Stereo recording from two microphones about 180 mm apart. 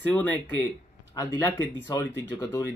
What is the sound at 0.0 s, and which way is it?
Speech, 10° left (ahead or behind).